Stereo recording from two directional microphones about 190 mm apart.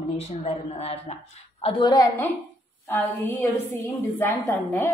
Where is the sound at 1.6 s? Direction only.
25° left (ahead or behind).